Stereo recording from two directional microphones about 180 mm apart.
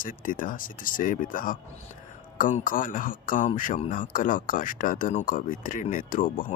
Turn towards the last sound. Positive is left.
turn(degrees=50)  # may be behind; listen again after turning